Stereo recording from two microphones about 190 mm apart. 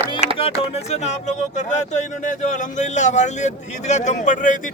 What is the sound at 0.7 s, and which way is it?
Speech, 35° left (ahead or behind).